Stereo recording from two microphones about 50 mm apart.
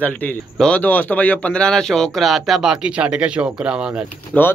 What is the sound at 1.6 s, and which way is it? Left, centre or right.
Speech, centre.